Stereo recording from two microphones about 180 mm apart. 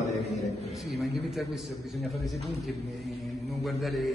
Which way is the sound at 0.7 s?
Centre (ahead or behind).